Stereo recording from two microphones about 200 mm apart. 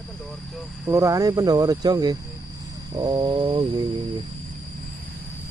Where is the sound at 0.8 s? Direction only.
15° right (ahead or behind).